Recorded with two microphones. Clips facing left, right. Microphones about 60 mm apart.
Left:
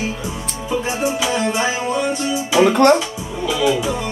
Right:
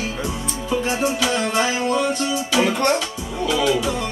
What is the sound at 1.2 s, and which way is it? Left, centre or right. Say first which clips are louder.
Music: left 1 dB; centre.